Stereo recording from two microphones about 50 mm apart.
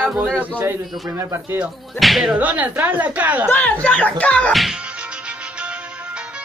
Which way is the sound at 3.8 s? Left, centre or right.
Left.